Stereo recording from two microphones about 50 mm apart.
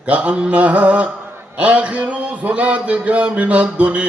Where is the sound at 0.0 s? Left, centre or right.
Right.